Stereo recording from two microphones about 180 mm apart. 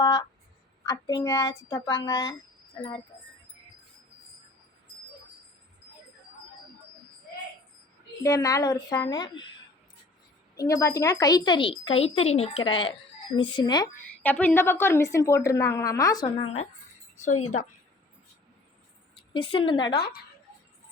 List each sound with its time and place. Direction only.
0.0 s speech: 25° left (ahead or behind)
8.2 s speech: 20° left (ahead or behind)
10.6 s speech: 15° left (ahead or behind)
14.2 s a woman's voice: 10° left (ahead or behind)
16.4 s a woman's voice: 35° left (ahead or behind)
19.3 s speech: 30° left (ahead or behind)